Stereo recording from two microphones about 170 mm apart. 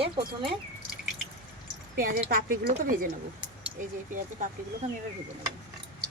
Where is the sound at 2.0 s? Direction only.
55° right (ahead or behind).